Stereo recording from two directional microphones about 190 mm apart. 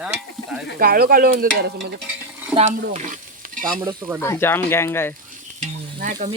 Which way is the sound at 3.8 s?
10° right (ahead or behind).